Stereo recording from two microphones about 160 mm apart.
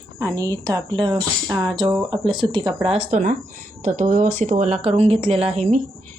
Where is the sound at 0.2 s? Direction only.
20° right (ahead or behind).